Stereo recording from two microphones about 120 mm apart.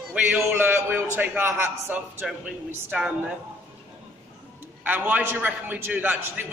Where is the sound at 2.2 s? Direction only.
5° right (ahead or behind).